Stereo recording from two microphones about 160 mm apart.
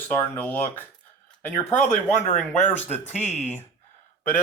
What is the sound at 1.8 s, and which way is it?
Speech, 50° left (ahead or behind).